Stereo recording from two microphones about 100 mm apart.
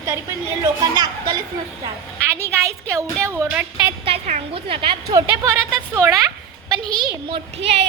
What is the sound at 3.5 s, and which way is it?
Speech, 15° right (ahead or behind).